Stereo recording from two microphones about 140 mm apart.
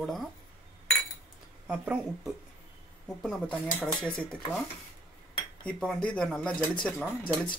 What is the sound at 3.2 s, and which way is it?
Speech, centre (ahead or behind).